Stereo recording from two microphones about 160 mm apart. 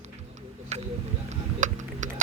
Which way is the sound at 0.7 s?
45° right (ahead or behind).